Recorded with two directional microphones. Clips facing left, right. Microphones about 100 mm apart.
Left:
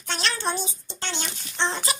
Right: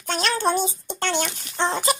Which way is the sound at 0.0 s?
45° right (ahead or behind).